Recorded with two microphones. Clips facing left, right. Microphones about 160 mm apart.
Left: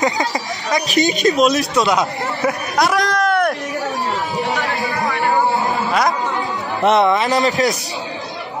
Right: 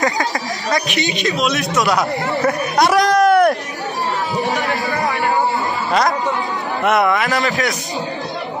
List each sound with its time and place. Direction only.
0.0 s speech: 20° left (ahead or behind)
0.8 s speech: 40° left (ahead or behind)
1.8 s speech: 20° left (ahead or behind)
2.4 s chatter: centre (ahead or behind)
6.8 s speech: 25° left (ahead or behind)